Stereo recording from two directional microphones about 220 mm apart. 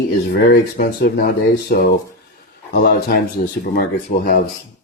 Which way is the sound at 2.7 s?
45° left (ahead or behind).